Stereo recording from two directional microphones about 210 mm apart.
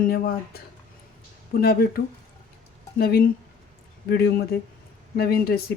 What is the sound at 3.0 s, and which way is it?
Speech, 45° left (ahead or behind).